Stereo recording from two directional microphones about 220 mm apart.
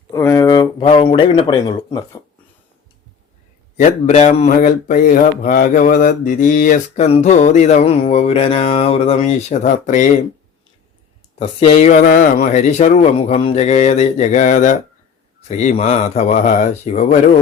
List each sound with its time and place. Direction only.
0.1 s speech: 15° left (ahead or behind)
3.8 s speech: 35° left (ahead or behind)
11.3 s speech: 25° left (ahead or behind)